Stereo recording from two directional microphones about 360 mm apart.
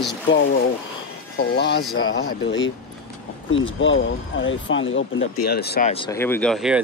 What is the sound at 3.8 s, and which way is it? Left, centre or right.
Speech, left.